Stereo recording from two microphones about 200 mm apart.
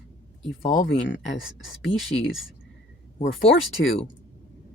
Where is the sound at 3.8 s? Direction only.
55° left (ahead or behind).